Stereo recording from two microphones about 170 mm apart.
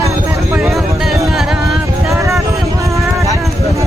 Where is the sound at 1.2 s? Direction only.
Centre (ahead or behind).